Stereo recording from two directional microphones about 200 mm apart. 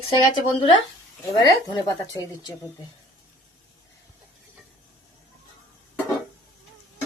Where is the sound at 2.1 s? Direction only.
20° left (ahead or behind).